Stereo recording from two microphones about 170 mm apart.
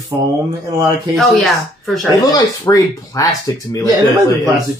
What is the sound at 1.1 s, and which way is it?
Speech, centre (ahead or behind).